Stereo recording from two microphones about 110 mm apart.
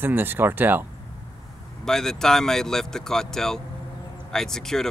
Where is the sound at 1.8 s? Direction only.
5° left (ahead or behind).